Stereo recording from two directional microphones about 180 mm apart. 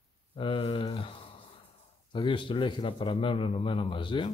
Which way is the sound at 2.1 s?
30° left (ahead or behind).